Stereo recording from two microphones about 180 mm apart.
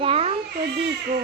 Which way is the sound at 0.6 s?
65° right (ahead or behind).